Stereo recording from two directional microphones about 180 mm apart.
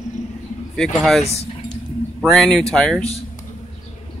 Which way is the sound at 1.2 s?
35° left (ahead or behind).